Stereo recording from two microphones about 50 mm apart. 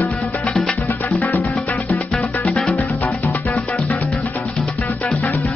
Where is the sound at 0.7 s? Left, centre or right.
Left.